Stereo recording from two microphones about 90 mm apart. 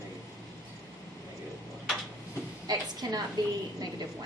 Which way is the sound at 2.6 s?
45° right (ahead or behind).